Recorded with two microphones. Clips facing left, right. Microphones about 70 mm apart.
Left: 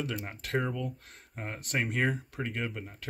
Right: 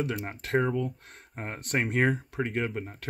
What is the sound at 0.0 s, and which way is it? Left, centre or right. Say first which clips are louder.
Speech: right 4 dB; right.